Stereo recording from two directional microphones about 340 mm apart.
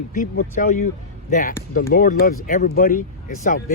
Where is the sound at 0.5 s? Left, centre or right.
Left.